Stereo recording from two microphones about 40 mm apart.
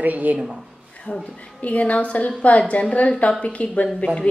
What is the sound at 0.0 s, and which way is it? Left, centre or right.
Speech, right.